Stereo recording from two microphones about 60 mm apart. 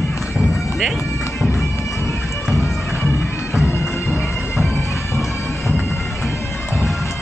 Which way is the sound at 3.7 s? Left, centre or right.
Left.